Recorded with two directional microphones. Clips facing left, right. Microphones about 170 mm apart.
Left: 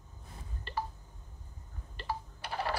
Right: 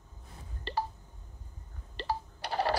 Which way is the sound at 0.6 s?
35° right (ahead or behind).